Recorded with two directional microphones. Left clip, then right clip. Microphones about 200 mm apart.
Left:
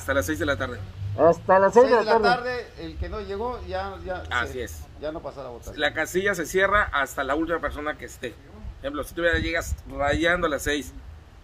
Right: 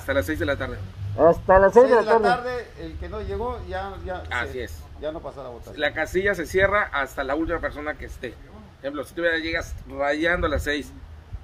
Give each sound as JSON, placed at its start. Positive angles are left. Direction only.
{"t": 0.0, "sound": "a man's voice", "side_deg": 15}
{"t": 1.1, "sound": "speech", "side_deg": -10}
{"t": 2.2, "sound": "a man's voice", "side_deg": 10}
{"t": 5.7, "sound": "speech", "side_deg": 25}